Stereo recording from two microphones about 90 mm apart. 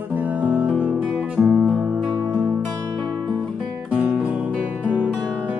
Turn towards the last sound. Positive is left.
turn(degrees=-15)  # may be behind; listen again after turning